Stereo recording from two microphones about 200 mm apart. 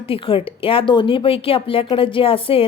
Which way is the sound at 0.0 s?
25° left (ahead or behind).